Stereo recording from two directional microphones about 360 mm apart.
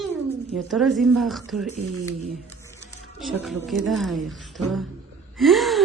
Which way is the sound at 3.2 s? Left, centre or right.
Centre.